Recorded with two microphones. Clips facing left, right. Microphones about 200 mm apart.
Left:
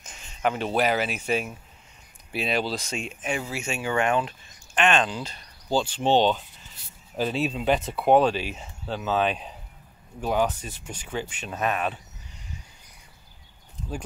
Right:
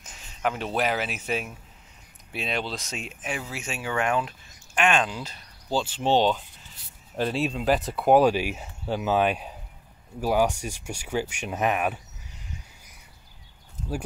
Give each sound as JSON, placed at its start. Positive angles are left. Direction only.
{"t": 0.0, "sound": "speech", "side_deg": 0}